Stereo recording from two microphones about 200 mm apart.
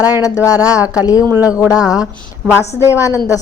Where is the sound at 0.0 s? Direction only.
20° left (ahead or behind).